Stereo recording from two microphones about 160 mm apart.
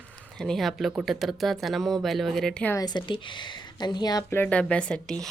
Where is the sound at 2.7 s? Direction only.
25° left (ahead or behind).